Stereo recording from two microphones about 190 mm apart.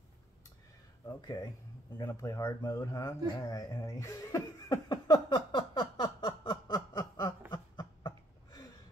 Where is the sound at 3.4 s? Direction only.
15° left (ahead or behind).